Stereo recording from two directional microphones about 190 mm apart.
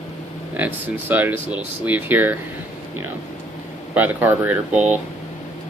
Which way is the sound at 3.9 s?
10° right (ahead or behind).